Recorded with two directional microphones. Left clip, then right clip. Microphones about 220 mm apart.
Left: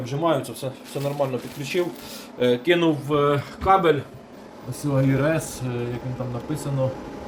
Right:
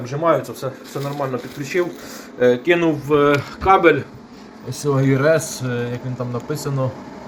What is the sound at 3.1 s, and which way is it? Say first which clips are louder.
A man's voice: right 6 dB; 10° right (ahead or behind).